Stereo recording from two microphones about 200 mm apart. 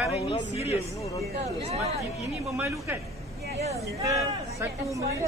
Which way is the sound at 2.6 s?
10° right (ahead or behind).